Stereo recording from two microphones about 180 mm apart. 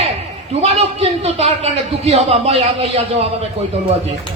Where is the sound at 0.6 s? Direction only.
35° right (ahead or behind).